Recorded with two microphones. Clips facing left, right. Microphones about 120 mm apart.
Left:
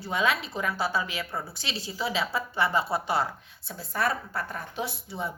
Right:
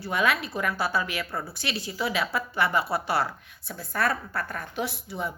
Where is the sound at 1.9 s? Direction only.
25° left (ahead or behind).